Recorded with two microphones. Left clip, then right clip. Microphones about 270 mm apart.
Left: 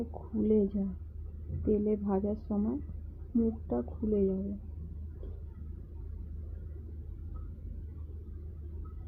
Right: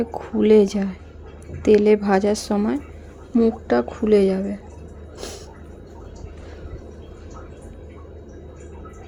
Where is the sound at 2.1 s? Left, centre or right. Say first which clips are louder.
Right 14 dB; right.